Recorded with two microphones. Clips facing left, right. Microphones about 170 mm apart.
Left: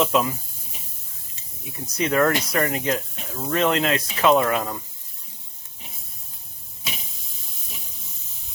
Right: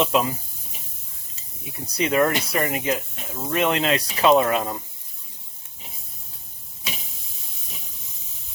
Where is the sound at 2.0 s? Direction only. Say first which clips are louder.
Even; 15° right (ahead or behind).